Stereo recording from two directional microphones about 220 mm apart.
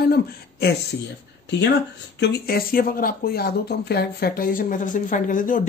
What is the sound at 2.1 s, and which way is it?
Speech, 50° left (ahead or behind).